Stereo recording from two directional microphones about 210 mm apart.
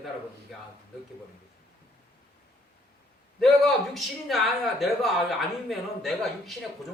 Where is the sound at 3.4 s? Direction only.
Centre (ahead or behind).